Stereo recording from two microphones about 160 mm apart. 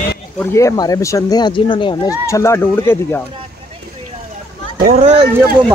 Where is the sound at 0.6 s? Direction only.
20° left (ahead or behind).